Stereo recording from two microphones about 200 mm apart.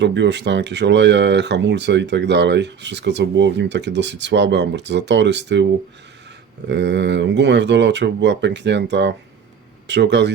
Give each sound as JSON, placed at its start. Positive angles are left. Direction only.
{"t": 0.0, "sound": "speech", "side_deg": -60}
{"t": 6.7, "sound": "speech", "side_deg": -60}